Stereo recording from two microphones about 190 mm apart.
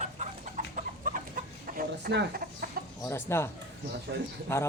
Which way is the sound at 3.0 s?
10° left (ahead or behind).